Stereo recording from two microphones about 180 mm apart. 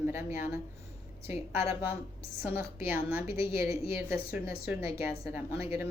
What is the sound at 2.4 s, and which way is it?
Speech, 10° right (ahead or behind).